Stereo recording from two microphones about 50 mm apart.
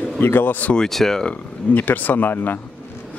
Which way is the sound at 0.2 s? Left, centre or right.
Left.